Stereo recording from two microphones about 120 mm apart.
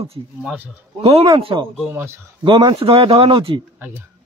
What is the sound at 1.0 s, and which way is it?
Speech, 55° right (ahead or behind).